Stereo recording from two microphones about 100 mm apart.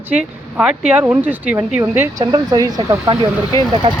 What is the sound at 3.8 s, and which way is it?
Speech, 60° right (ahead or behind).